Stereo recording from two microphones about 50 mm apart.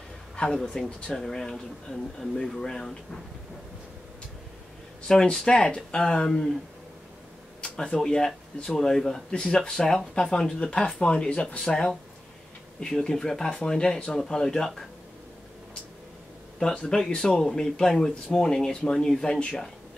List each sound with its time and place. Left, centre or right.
0.4 s speech: centre
0.8 s speech: centre
5.0 s speech: centre
7.6 s speech: centre
9.3 s speech: left
16.5 s speech: centre